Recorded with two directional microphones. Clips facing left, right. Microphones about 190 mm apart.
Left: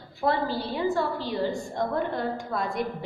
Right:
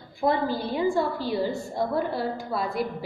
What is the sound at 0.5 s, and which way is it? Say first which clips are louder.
A woman's voice: right 2 dB; 10° right (ahead or behind).